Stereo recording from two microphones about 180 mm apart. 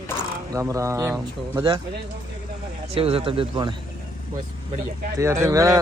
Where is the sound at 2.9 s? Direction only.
30° right (ahead or behind).